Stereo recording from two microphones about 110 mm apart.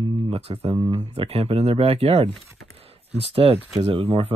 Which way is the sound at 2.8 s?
65° right (ahead or behind).